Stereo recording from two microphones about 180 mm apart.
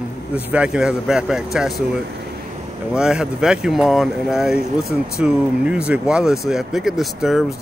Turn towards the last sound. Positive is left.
turn(degrees=0)  # may be behind; listen again after turning